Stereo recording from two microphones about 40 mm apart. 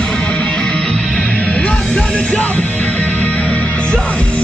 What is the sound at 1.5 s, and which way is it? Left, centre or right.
Music, left.